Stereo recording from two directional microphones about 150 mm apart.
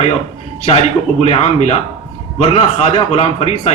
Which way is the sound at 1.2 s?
45° left (ahead or behind).